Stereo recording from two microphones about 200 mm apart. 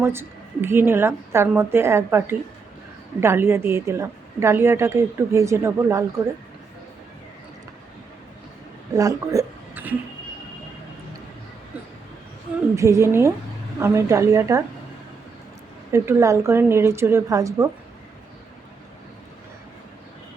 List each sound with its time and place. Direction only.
0.0 s a woman's voice: 10° right (ahead or behind)
9.0 s a sound: 15° right (ahead or behind)
12.7 s a woman's voice: 15° right (ahead or behind)
15.9 s a woman's voice: 15° right (ahead or behind)